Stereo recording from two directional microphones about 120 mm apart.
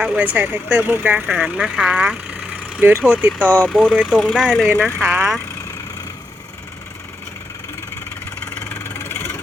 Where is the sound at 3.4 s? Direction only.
10° left (ahead or behind).